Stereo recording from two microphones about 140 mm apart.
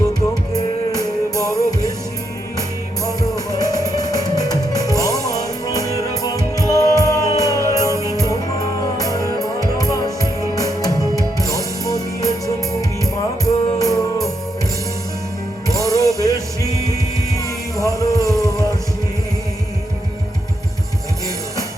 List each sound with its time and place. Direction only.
0.5 s music: 25° left (ahead or behind)
3.1 s music: 25° left (ahead or behind)
9.4 s music: 25° left (ahead or behind)
13.4 s music: 25° left (ahead or behind)
15.9 s music: 25° left (ahead or behind)
17.3 s music: 25° left (ahead or behind)